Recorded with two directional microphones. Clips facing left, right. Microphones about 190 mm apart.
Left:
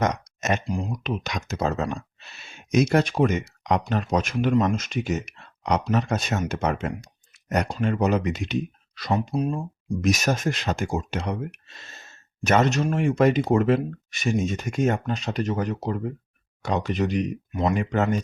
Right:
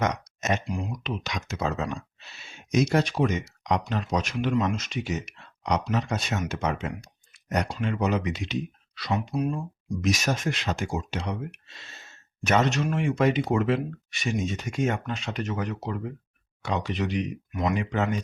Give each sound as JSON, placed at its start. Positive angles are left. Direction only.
{"t": 0.6, "sound": "speech", "side_deg": 35}
{"t": 0.9, "sound": "speech", "side_deg": 50}
{"t": 1.8, "sound": "speech", "side_deg": 55}
{"t": 9.3, "sound": "speech", "side_deg": 30}
{"t": 10.0, "sound": "speech", "side_deg": 50}
{"t": 17.5, "sound": "speech", "side_deg": 30}
{"t": 17.7, "sound": "speech", "side_deg": 45}